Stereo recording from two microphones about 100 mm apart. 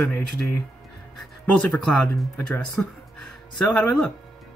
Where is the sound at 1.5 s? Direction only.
5° left (ahead or behind).